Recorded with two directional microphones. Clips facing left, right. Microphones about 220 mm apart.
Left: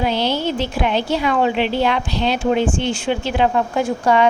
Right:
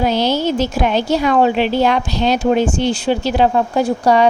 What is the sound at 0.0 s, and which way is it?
A woman's voice, 40° right (ahead or behind).